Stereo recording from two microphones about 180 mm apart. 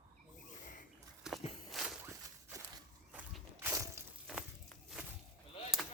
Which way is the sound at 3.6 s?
15° right (ahead or behind).